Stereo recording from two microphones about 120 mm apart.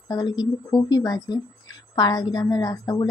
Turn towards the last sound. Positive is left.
turn(degrees=30)  # may be behind; listen again after turning